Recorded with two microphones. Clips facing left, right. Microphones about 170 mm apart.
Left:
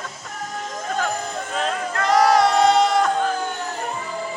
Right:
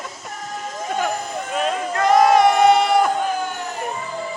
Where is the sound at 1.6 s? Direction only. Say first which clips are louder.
Right 4 dB; 20° right (ahead or behind).